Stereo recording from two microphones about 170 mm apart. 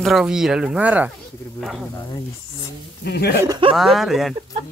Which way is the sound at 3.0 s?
75° left (ahead or behind).